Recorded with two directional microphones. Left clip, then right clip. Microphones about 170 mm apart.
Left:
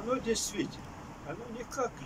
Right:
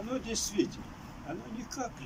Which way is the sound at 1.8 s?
5° right (ahead or behind).